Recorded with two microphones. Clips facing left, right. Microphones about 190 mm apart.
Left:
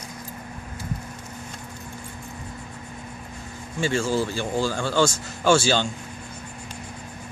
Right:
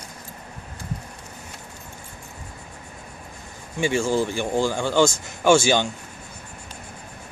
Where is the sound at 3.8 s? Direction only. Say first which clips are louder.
Right 2 dB; 15° right (ahead or behind).